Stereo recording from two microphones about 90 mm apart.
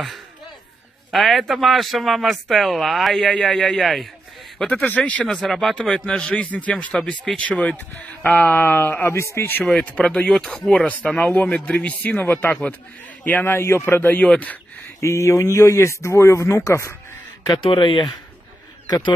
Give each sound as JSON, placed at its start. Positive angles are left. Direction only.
{"t": 1.1, "sound": "speech", "side_deg": 0}
{"t": 4.6, "sound": "a man's voice", "side_deg": 15}
{"t": 9.8, "sound": "a man's voice", "side_deg": 15}
{"t": 15.0, "sound": "speech", "side_deg": 35}
{"t": 17.6, "sound": "speech", "side_deg": 70}
{"t": 18.9, "sound": "speech", "side_deg": 50}